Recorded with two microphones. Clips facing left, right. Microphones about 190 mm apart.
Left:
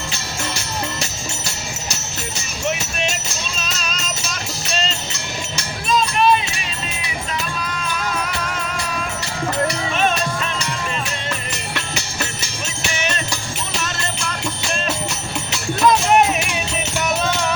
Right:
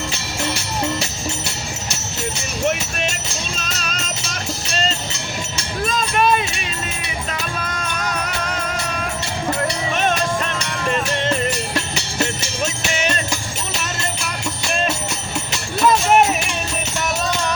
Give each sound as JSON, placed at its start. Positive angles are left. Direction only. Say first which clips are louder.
{"t": 3.6, "sound": "music", "louder": "even", "side_deg": -50}
{"t": 5.9, "sound": "a sound", "louder": "left 3 dB", "side_deg": -50}
{"t": 15.9, "sound": "music", "louder": "even", "side_deg": 0}